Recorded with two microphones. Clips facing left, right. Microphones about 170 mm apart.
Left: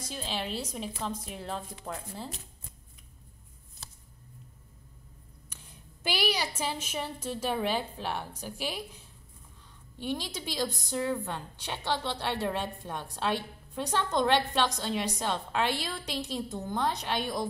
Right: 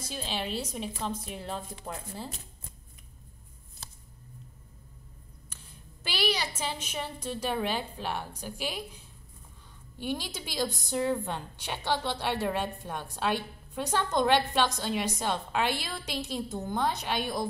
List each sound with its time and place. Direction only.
0.0 s a woman's voice: centre (ahead or behind)
6.0 s a woman's voice: 10° left (ahead or behind)
9.9 s a woman's voice: 5° right (ahead or behind)